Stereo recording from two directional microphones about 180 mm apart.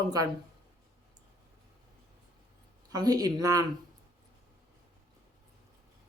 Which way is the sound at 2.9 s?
20° right (ahead or behind).